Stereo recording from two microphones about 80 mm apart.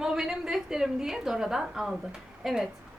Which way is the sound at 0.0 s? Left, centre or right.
Centre.